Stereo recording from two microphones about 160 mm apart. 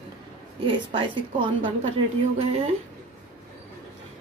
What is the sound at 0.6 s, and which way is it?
Speech, 30° right (ahead or behind).